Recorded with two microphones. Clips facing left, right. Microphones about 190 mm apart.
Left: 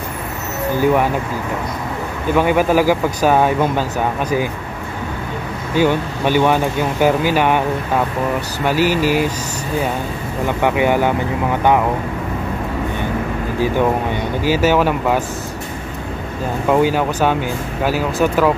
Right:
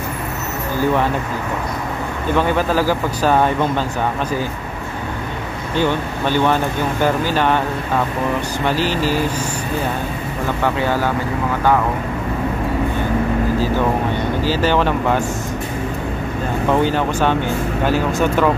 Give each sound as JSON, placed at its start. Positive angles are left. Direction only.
{"t": 2.3, "sound": "speech", "side_deg": 10}
{"t": 5.8, "sound": "speech", "side_deg": 10}
{"t": 8.6, "sound": "speech", "side_deg": 10}
{"t": 10.6, "sound": "speech", "side_deg": 15}
{"t": 14.4, "sound": "speech", "side_deg": 10}
{"t": 16.7, "sound": "speech", "side_deg": 10}